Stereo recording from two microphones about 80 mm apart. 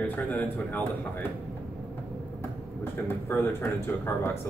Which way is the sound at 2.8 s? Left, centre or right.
Left.